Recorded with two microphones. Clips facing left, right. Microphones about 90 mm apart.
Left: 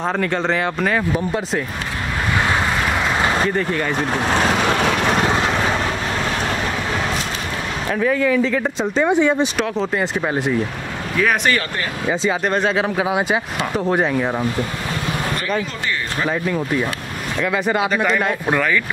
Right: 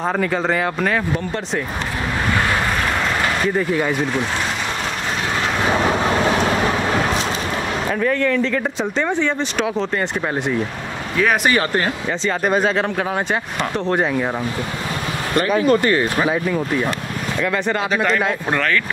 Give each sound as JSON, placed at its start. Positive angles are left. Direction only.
{"t": 0.0, "sound": "speech", "side_deg": -5}
{"t": 3.5, "sound": "speech", "side_deg": -10}
{"t": 4.4, "sound": "vehicle", "side_deg": 70}
{"t": 7.9, "sound": "speech", "side_deg": 5}
{"t": 15.6, "sound": "speech", "side_deg": -50}
{"t": 16.3, "sound": "speech", "side_deg": -5}